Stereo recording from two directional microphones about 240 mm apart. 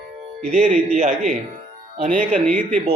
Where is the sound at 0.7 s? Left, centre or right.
Right.